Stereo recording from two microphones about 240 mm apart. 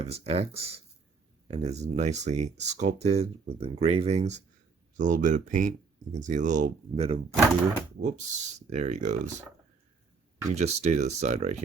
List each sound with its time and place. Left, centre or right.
0.0 s speech: right
10.5 s speech: right